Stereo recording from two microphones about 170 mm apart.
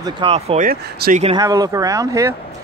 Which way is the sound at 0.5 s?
55° right (ahead or behind).